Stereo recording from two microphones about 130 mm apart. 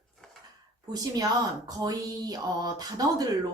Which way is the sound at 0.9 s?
30° right (ahead or behind).